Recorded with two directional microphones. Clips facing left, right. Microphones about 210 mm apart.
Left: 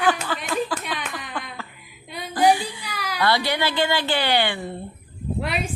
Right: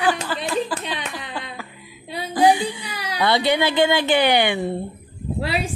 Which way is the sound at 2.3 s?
20° right (ahead or behind).